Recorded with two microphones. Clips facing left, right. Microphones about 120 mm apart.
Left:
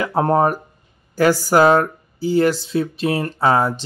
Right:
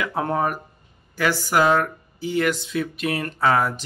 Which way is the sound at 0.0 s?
35° left (ahead or behind).